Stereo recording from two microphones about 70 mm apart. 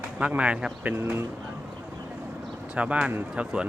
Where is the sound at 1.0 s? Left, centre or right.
Right.